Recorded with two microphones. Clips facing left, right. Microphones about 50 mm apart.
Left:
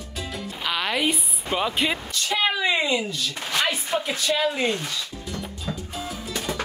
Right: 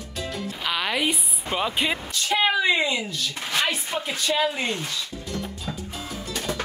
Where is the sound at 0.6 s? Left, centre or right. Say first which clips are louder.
Left 1 dB; centre.